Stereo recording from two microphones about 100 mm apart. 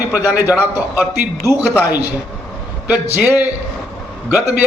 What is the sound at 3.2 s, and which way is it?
Speech, 20° right (ahead or behind).